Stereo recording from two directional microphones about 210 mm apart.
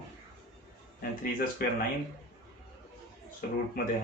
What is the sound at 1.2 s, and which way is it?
Speech, 45° left (ahead or behind).